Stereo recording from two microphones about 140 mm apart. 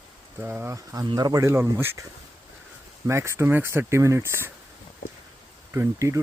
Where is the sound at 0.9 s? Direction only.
30° right (ahead or behind).